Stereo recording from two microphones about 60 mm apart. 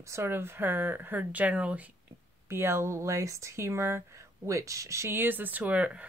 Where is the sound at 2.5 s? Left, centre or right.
Right.